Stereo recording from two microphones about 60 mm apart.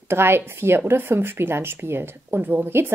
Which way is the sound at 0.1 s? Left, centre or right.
Right.